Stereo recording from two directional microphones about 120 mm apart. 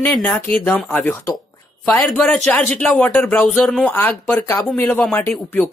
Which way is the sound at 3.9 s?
15° left (ahead or behind).